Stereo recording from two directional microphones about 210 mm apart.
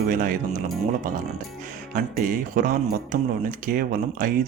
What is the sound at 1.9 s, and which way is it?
Speech, 40° right (ahead or behind).